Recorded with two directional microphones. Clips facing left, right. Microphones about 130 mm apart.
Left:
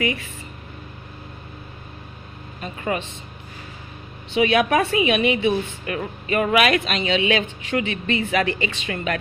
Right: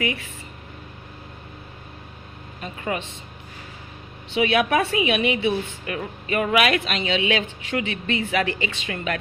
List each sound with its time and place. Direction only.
2.6 s a woman's voice: 40° left (ahead or behind)
4.4 s a woman's voice: 40° left (ahead or behind)